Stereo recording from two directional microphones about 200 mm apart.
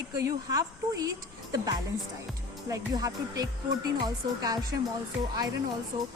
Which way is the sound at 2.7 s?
20° right (ahead or behind).